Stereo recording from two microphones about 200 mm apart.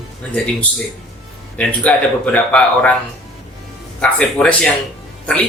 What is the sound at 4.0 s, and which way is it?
Speech, 5° left (ahead or behind).